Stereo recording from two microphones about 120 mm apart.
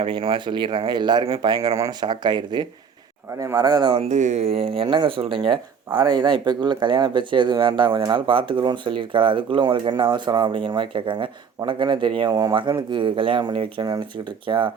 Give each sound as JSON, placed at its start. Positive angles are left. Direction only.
{"t": 0.0, "sound": "speech", "side_deg": -45}
{"t": 3.9, "sound": "speech", "side_deg": -80}